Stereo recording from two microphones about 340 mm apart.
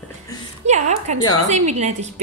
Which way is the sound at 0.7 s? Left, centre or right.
Centre.